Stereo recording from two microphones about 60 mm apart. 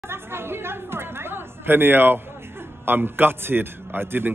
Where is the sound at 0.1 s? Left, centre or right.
Right.